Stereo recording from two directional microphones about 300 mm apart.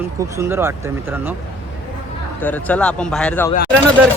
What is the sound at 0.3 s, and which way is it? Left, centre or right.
Speech, centre.